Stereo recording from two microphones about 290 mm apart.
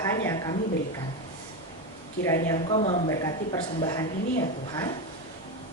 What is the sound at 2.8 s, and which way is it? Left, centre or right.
Speech, left.